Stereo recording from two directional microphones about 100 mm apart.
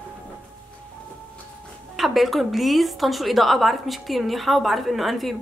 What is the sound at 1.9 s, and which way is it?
A woman's voice, centre (ahead or behind).